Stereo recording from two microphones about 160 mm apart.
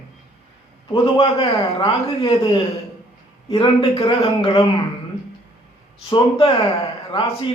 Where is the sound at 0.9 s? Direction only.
35° left (ahead or behind).